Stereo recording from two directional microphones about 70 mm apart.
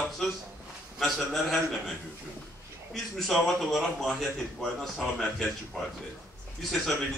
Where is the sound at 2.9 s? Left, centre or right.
Centre.